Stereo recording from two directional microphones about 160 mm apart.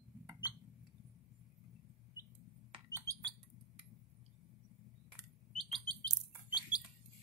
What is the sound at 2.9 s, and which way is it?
Bird, 20° right (ahead or behind).